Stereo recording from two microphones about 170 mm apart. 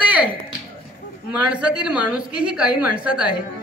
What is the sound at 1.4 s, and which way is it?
A woman's voice, 5° right (ahead or behind).